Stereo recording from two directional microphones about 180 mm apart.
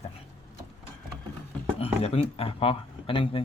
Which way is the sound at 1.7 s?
35° left (ahead or behind).